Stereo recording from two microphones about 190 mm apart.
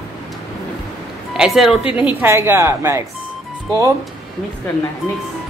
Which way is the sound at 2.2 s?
10° right (ahead or behind).